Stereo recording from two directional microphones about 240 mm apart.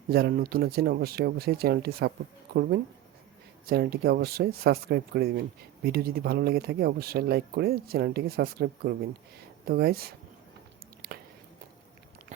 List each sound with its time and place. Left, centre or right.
0.1 s speech: right